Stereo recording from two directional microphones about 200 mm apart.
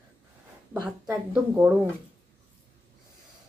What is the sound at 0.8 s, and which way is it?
Speech, 10° right (ahead or behind).